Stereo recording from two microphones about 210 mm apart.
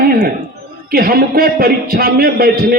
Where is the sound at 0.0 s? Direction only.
45° right (ahead or behind).